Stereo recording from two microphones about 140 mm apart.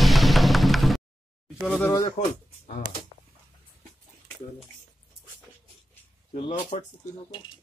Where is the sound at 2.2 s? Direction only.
90° left.